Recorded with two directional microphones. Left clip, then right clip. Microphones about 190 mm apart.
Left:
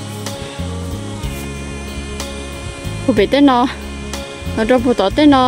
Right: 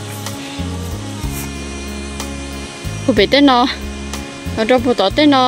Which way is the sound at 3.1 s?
10° left (ahead or behind).